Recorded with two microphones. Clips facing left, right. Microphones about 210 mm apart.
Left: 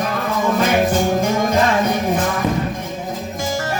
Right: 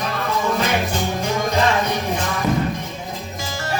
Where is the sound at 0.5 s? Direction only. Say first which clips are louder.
Left 5 dB; 50° left (ahead or behind).